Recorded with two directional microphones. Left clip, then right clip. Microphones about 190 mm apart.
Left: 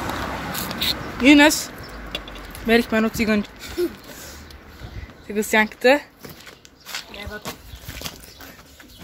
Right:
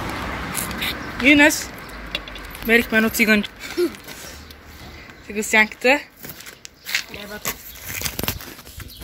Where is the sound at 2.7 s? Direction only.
10° left (ahead or behind).